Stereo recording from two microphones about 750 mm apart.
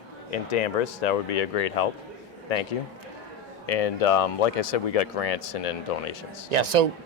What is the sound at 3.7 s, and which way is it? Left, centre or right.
Speech, left.